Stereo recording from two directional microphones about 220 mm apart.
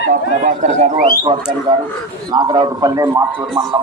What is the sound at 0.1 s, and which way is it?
Speech, 35° right (ahead or behind).